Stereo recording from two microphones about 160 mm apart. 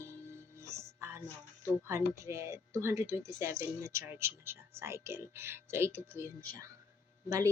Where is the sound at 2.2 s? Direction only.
20° right (ahead or behind).